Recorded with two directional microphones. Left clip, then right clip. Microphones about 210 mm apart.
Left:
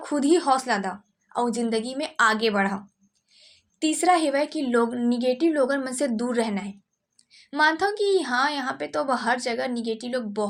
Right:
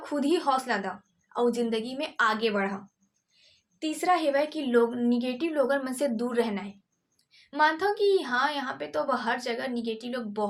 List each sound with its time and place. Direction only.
0.0 s a woman's voice: 35° left (ahead or behind)
3.8 s a woman's voice: 40° left (ahead or behind)